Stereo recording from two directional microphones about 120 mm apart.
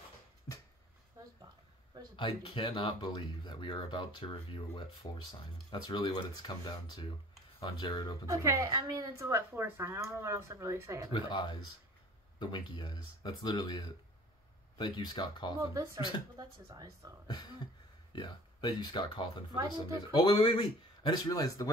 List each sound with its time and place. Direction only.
0.5 s a sound: 25° left (ahead or behind)
2.1 s speech: 45° left (ahead or behind)
8.3 s speech: 25° right (ahead or behind)
11.1 s speech: 40° left (ahead or behind)
15.7 s speech: 25° right (ahead or behind)
18.1 s speech: 35° left (ahead or behind)